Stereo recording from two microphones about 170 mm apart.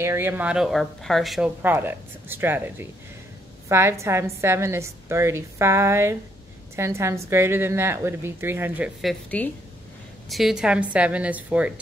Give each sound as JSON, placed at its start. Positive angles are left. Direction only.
{"t": 0.0, "sound": "speech", "side_deg": -15}
{"t": 1.6, "sound": "a woman's voice", "side_deg": -10}
{"t": 9.3, "sound": "a woman's voice", "side_deg": 10}
{"t": 10.3, "sound": "a woman's voice", "side_deg": 0}